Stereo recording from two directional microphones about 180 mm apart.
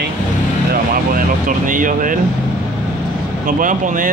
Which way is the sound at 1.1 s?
50° right (ahead or behind).